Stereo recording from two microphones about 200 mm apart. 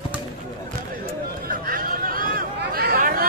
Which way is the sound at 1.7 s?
45° right (ahead or behind).